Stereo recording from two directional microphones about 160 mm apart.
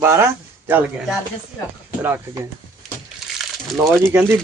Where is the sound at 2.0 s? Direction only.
15° right (ahead or behind).